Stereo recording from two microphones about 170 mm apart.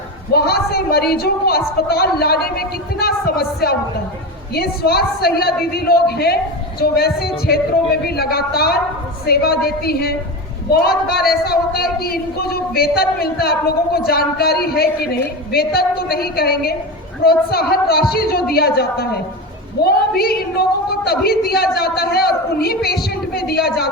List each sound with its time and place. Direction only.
0.3 s a woman's voice: 65° left (ahead or behind)